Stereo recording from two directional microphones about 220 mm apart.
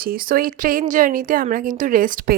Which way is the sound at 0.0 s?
40° right (ahead or behind).